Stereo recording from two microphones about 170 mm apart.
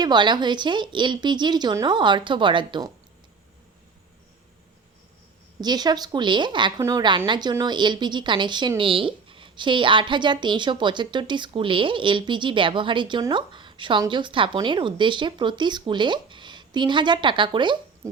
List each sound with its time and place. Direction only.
0.0 s a woman's voice: 25° right (ahead or behind)
5.5 s a woman's voice: 25° right (ahead or behind)